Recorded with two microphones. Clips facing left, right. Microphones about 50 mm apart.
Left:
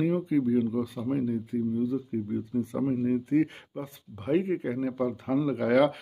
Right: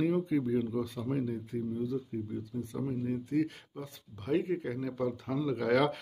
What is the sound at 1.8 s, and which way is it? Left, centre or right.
Speech, centre.